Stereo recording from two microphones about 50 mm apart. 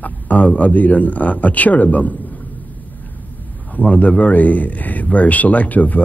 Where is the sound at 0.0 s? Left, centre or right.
Left.